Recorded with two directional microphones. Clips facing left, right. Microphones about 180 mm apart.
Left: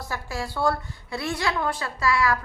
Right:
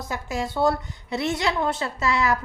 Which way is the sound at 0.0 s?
20° right (ahead or behind).